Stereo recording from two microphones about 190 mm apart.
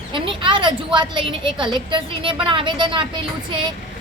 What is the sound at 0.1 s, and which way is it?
A woman's voice, 25° right (ahead or behind).